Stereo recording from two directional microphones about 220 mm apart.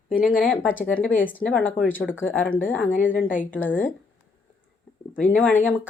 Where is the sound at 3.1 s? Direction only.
35° left (ahead or behind).